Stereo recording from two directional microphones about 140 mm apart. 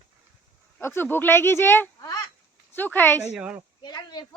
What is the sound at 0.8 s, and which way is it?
Speech, 15° left (ahead or behind).